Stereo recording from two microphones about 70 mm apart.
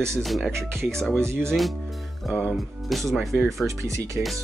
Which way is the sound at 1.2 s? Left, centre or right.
Right.